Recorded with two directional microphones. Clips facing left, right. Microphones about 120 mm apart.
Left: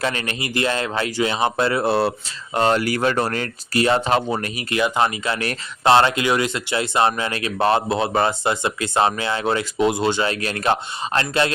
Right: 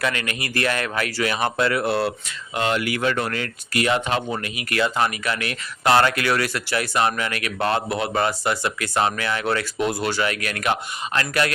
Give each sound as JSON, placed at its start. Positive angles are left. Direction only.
{"t": 0.0, "sound": "speech", "side_deg": 30}
{"t": 4.7, "sound": "speech", "side_deg": 20}